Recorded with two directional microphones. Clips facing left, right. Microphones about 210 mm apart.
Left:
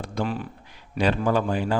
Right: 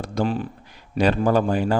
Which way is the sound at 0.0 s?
40° right (ahead or behind).